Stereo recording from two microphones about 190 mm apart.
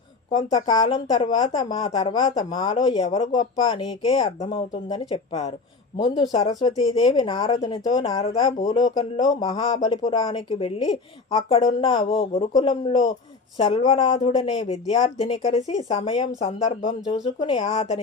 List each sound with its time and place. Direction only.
0.3 s speech: 25° left (ahead or behind)